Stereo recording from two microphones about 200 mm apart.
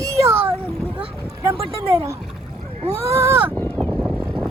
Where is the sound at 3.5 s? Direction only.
10° left (ahead or behind).